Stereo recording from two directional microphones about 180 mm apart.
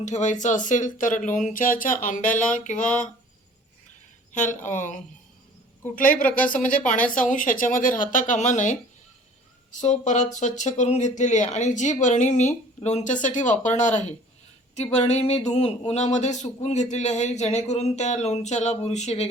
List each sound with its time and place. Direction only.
0.0 s speech: 40° left (ahead or behind)
4.3 s speech: 45° left (ahead or behind)
9.8 s speech: 40° left (ahead or behind)